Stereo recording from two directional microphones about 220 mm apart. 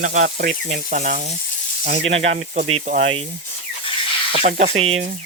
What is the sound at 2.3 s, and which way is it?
Speech, 35° right (ahead or behind).